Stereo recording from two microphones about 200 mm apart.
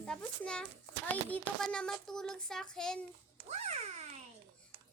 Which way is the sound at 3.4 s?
35° right (ahead or behind).